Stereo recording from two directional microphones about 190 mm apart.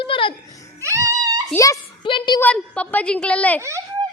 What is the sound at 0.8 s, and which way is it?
Music, 15° right (ahead or behind).